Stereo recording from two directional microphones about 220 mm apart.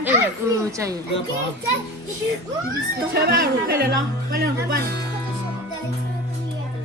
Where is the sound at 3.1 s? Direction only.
45° right (ahead or behind).